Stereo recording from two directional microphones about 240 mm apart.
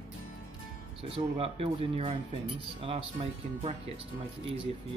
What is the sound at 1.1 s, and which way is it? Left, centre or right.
Speech, right.